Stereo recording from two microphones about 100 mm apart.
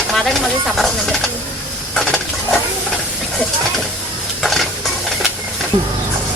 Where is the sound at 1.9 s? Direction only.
5° left (ahead or behind).